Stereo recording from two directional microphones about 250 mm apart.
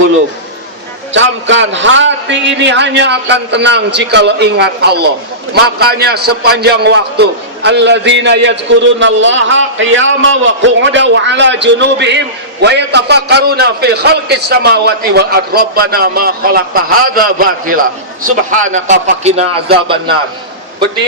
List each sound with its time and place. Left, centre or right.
1.1 s a man's voice: right